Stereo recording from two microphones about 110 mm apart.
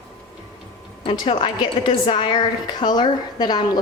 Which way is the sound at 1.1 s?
50° left (ahead or behind).